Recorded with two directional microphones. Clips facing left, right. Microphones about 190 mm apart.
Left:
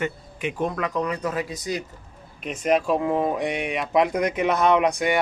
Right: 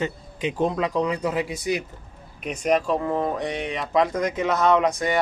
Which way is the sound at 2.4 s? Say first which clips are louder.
Even; centre (ahead or behind).